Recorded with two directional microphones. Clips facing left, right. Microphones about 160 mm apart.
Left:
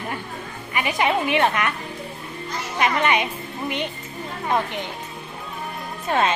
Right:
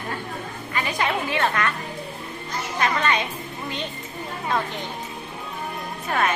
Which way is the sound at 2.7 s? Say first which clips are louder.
Left 3 dB; 20° left (ahead or behind).